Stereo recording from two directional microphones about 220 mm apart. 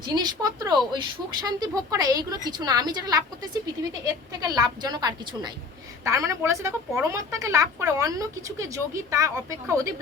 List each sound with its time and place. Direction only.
0.0 s a woman's voice: 20° right (ahead or behind)